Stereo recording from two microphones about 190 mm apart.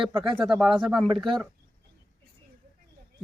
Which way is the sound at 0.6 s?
5° right (ahead or behind).